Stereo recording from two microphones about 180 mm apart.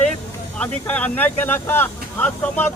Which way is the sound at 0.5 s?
5° left (ahead or behind).